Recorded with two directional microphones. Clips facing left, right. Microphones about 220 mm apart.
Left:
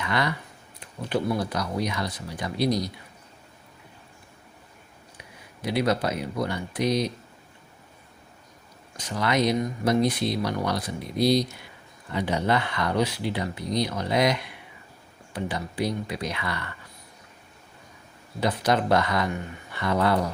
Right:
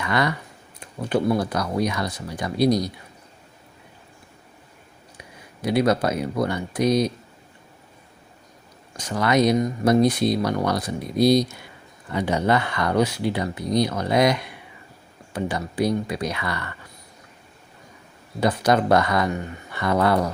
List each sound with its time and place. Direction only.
0.0 s speech: 50° right (ahead or behind)
1.3 s speech: 50° right (ahead or behind)
5.6 s speech: 45° right (ahead or behind)
9.0 s speech: 45° right (ahead or behind)
15.4 s speech: 45° right (ahead or behind)
18.3 s speech: 45° right (ahead or behind)